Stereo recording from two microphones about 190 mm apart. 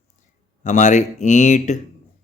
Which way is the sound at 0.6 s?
40° left (ahead or behind).